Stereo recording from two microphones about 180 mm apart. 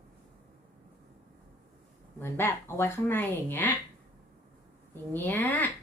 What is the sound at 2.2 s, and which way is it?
Speech, 15° left (ahead or behind).